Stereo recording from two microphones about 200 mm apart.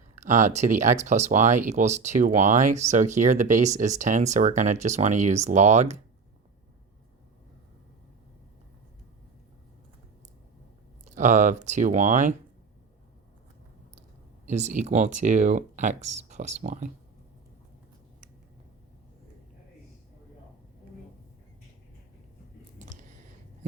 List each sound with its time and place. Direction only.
0.3 s speech: 35° right (ahead or behind)
11.1 s speech: 35° right (ahead or behind)
14.4 s speech: 35° right (ahead or behind)
22.8 s a sound: 35° right (ahead or behind)